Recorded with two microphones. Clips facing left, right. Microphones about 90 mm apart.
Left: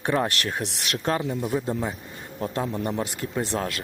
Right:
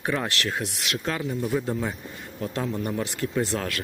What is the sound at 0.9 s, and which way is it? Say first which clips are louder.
Speech: left 5 dB; 40° left (ahead or behind).